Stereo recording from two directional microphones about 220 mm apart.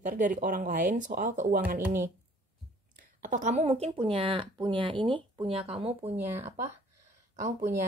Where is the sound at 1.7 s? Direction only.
10° right (ahead or behind).